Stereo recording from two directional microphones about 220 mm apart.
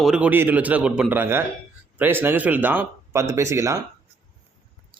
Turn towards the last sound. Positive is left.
turn(degrees=-15)  # may be behind; listen again after turning